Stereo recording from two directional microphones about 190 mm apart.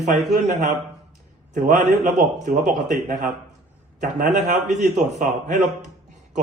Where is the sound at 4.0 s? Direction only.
40° right (ahead or behind).